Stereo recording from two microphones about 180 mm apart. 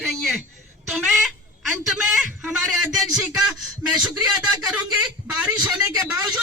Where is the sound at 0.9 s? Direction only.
Centre (ahead or behind).